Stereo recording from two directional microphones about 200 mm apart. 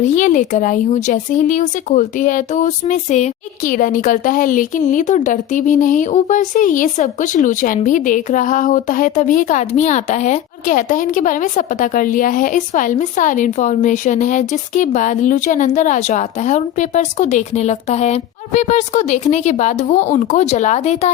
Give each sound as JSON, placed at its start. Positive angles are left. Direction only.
{"t": 0.0, "sound": "speech", "side_deg": 35}